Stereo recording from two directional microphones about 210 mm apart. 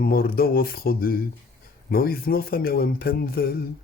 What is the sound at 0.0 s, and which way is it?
Speech, 45° left (ahead or behind).